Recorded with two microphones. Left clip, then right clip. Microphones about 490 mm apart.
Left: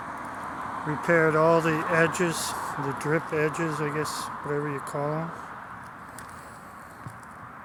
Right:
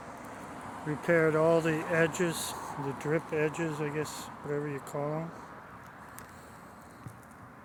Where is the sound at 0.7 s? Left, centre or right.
Right.